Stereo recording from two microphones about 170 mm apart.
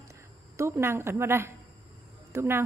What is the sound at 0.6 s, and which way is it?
A woman's voice, 15° right (ahead or behind).